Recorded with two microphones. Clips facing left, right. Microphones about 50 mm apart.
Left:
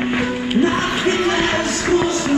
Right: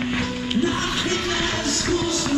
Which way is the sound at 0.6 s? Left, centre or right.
Left.